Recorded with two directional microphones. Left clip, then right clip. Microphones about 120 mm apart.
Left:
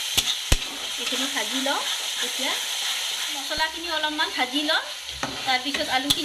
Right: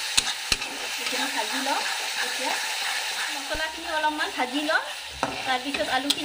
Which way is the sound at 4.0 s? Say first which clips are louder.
Left 1 dB; 25° right (ahead or behind).